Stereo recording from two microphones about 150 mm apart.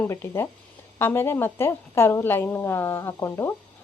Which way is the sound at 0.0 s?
15° left (ahead or behind).